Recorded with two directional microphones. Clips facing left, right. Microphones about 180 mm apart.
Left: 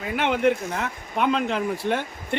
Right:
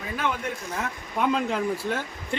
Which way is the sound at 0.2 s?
80° left.